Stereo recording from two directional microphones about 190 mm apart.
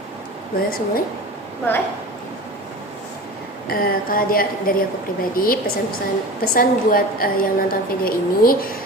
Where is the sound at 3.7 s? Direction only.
50° left (ahead or behind).